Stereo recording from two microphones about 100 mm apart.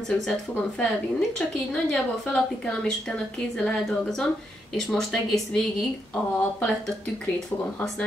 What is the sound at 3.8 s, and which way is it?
Speech, 5° left (ahead or behind).